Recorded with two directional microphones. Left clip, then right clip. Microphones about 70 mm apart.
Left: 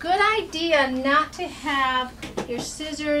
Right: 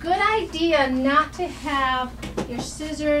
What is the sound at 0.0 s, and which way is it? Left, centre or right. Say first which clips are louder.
A woman's voice: even; left.